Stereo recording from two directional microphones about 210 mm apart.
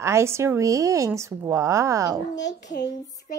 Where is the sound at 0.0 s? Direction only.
15° right (ahead or behind).